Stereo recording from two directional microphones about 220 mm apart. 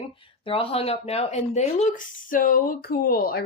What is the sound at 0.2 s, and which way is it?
Speech, 25° left (ahead or behind).